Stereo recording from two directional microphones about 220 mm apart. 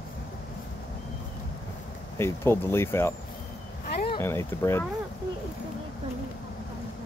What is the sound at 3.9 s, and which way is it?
Vehicle, 45° left (ahead or behind).